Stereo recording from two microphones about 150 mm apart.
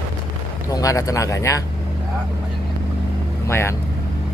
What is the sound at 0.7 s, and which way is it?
Speech, 25° left (ahead or behind).